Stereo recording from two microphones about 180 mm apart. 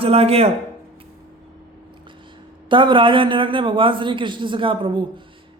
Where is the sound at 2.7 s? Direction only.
25° right (ahead or behind).